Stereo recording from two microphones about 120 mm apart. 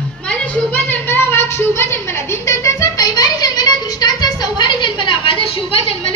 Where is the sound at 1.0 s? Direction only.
20° left (ahead or behind).